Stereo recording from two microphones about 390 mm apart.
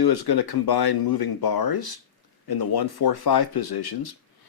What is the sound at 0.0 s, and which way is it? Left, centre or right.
Speech, left.